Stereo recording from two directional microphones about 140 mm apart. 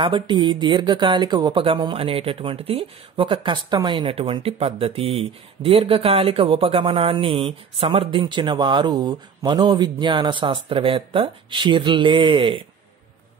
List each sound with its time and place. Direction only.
0.0 s speech: 35° right (ahead or behind)